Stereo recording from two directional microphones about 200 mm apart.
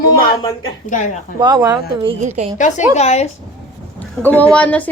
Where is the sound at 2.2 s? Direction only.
35° right (ahead or behind).